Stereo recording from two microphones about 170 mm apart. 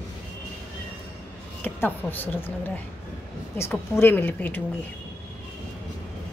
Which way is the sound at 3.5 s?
15° left (ahead or behind).